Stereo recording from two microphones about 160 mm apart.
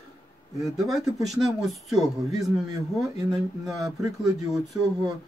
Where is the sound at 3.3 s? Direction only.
Centre (ahead or behind).